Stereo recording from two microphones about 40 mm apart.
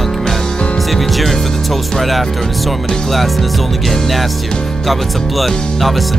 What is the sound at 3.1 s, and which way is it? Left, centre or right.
Speech, centre.